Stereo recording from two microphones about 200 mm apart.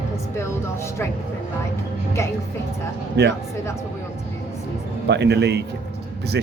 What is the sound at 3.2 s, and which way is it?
Speech, 55° right (ahead or behind).